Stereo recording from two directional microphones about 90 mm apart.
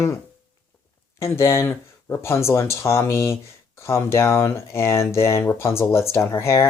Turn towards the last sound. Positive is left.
turn(degrees=30)  # may be behind; listen again after turning